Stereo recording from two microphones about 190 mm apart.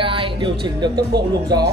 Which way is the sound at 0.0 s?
25° right (ahead or behind).